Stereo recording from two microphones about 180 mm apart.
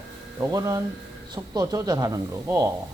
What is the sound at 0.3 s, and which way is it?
Speech, 20° right (ahead or behind).